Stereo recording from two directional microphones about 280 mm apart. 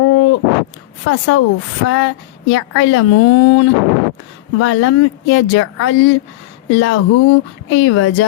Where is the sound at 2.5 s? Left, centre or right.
Left.